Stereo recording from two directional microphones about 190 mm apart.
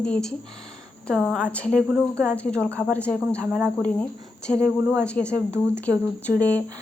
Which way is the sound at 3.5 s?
5° right (ahead or behind).